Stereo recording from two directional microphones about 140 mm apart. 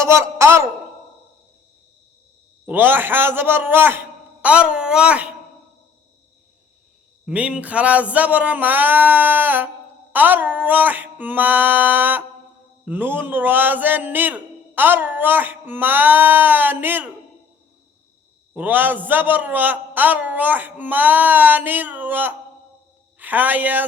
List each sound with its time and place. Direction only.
0.0 s a man's voice: 20° right (ahead or behind)
2.6 s a man's voice: 15° right (ahead or behind)
7.3 s a man's voice: 10° right (ahead or behind)
18.5 s a man's voice: 15° right (ahead or behind)